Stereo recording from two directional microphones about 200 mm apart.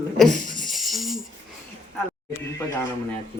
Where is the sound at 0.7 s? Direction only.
Centre (ahead or behind).